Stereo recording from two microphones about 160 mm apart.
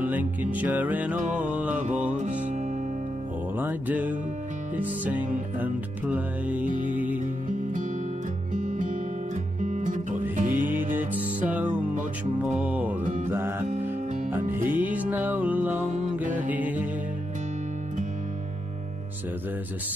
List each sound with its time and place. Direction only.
0.0 s music: 10° right (ahead or behind)
1.2 s music: 50° right (ahead or behind)
1.5 s music: 10° right (ahead or behind)
2.0 s music: 50° right (ahead or behind)
3.5 s music: 10° right (ahead or behind)
6.6 s music: 50° right (ahead or behind)
6.9 s music: 10° right (ahead or behind)
8.5 s music: 55° right (ahead or behind)
10.8 s music: 10° right (ahead or behind)
14.7 s music: 10° right (ahead or behind)